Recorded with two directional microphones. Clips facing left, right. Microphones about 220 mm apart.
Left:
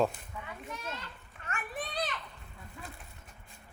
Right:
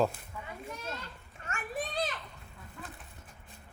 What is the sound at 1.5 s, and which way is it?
Children playing, 45° right (ahead or behind).